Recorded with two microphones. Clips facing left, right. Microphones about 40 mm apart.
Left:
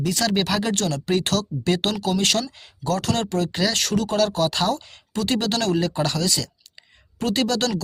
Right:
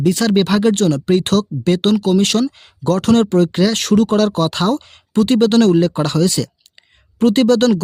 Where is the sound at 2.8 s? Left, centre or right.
Right.